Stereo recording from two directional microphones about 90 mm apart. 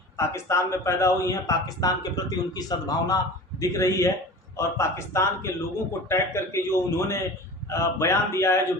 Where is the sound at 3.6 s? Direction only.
35° left (ahead or behind).